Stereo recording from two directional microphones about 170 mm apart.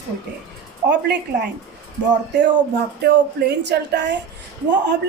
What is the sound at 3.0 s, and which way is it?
A woman's voice, 85° right.